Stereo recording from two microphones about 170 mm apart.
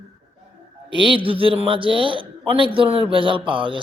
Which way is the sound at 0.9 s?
30° right (ahead or behind).